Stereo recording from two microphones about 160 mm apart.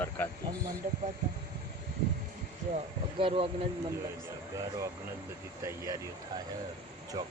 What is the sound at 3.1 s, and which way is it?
Speech, 35° right (ahead or behind).